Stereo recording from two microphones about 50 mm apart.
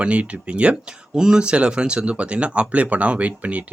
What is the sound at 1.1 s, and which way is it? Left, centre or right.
Speech, centre.